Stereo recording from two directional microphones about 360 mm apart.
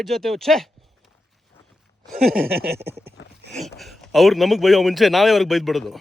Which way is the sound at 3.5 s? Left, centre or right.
Centre.